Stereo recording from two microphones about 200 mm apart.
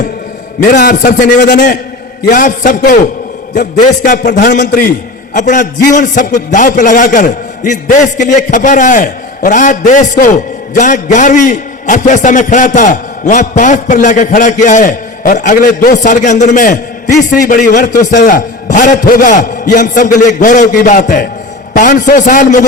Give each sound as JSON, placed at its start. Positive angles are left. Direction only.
{"t": 0.6, "sound": "a man's voice", "side_deg": 45}